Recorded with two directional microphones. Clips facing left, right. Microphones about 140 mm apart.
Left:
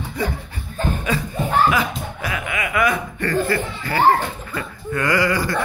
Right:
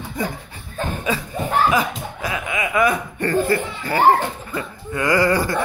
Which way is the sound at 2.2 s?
20° right (ahead or behind).